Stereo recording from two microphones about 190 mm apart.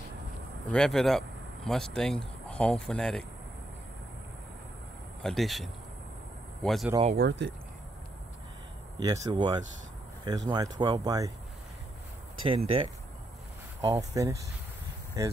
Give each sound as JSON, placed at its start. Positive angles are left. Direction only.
{"t": 0.7, "sound": "speech", "side_deg": 5}
{"t": 5.2, "sound": "a man's voice", "side_deg": 0}
{"t": 7.2, "sound": "speech", "side_deg": -65}
{"t": 8.9, "sound": "speech", "side_deg": -20}
{"t": 12.4, "sound": "speech", "side_deg": -30}
{"t": 13.9, "sound": "speech", "side_deg": -15}